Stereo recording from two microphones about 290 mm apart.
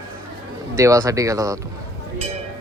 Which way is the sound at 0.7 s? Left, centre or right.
Centre.